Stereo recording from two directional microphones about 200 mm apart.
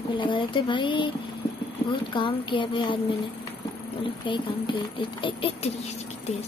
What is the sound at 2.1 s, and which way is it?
Speech, 25° left (ahead or behind).